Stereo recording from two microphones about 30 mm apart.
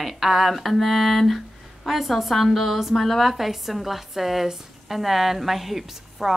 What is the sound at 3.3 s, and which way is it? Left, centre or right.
A woman's voice, centre.